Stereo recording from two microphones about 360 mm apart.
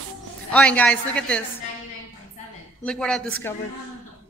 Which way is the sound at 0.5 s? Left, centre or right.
Centre.